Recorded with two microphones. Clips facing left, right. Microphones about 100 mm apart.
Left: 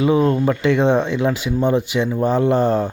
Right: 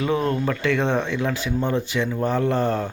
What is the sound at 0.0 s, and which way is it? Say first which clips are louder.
Speech: left 6 dB; 15° left (ahead or behind).